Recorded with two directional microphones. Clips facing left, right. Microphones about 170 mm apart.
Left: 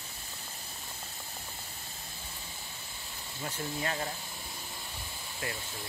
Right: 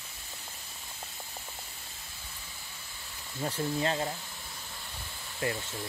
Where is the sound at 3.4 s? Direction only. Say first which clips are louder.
Right 5 dB; 30° right (ahead or behind).